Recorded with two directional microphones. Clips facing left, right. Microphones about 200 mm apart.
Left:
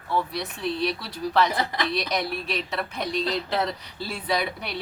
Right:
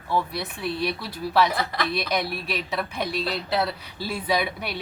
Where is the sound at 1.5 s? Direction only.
20° left (ahead or behind).